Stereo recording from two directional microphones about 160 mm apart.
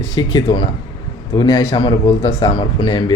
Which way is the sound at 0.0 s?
25° left (ahead or behind).